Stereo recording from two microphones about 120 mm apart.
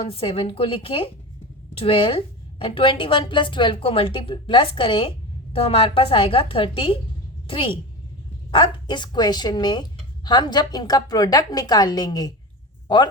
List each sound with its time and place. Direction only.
0.0 s a woman's voice: 50° left (ahead or behind); by 12.3 s 35° left (ahead or behind)